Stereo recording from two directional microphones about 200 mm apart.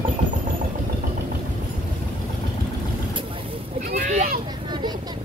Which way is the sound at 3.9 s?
40° right (ahead or behind).